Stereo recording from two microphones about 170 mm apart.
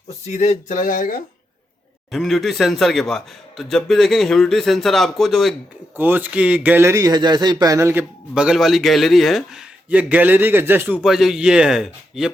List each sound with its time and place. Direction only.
0.3 s speech: 45° left (ahead or behind)
2.1 s a man's voice: centre (ahead or behind)
6.0 s speech: 10° right (ahead or behind)
8.4 s a man's voice: centre (ahead or behind)